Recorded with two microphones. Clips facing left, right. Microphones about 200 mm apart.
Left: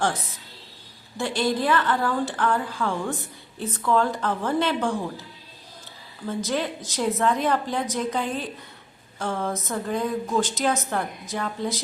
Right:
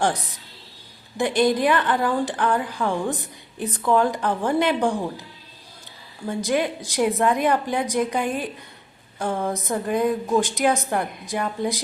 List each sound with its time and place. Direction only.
0.0 s a woman's voice: 15° right (ahead or behind)
6.2 s a woman's voice: 15° right (ahead or behind)